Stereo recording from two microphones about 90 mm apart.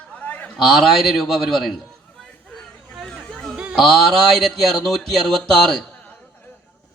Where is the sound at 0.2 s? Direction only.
15° left (ahead or behind).